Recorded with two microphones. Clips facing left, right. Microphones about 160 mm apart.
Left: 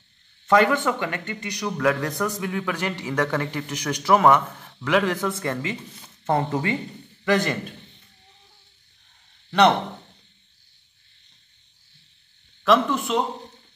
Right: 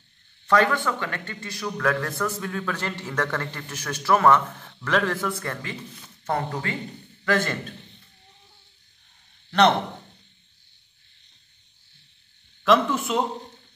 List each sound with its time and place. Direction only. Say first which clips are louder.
0.5 s a man's voice: left 3 dB; 20° left (ahead or behind)
12.6 s speech: left 1 dB; centre (ahead or behind)